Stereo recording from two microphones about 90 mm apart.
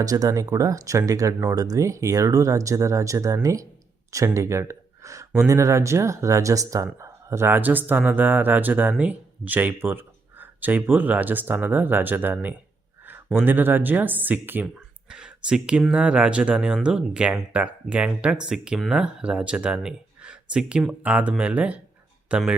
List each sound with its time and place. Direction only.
0.0 s speech: 40° right (ahead or behind); by 14.7 s 20° right (ahead or behind)
15.1 s speech: 10° right (ahead or behind)